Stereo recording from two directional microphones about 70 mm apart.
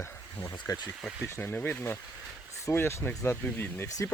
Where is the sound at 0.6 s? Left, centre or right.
Left.